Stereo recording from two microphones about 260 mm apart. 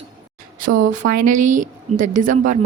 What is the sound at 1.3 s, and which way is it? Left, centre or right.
Speech, right.